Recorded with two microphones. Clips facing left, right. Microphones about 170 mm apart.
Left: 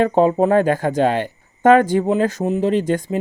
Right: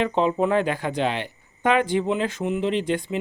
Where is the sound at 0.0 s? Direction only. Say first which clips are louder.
Left 6 dB; 45° left (ahead or behind).